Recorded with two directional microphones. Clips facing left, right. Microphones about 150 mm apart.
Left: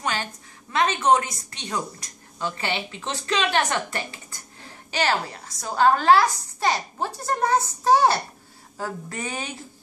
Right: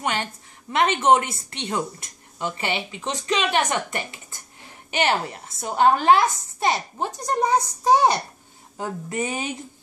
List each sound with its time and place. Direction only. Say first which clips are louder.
0.0 s a woman's voice: right 2 dB; 25° right (ahead or behind)